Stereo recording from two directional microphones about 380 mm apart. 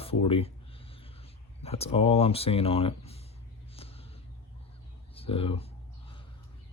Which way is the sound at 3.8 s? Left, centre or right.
Centre.